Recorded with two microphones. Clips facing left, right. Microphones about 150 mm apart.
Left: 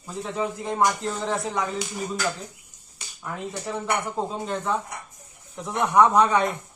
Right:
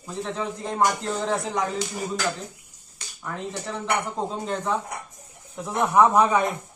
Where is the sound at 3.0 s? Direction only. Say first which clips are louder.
Even; 5° left (ahead or behind).